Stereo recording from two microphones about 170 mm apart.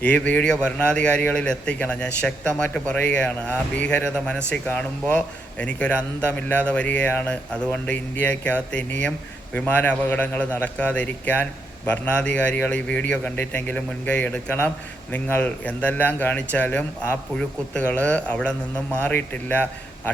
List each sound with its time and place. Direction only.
0.0 s speech: 10° left (ahead or behind)